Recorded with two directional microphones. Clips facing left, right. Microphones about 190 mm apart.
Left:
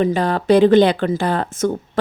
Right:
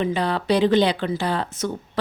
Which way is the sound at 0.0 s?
45° left (ahead or behind).